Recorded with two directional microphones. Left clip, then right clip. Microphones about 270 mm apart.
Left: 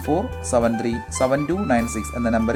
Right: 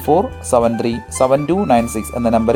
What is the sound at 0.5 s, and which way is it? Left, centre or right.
Speech, centre.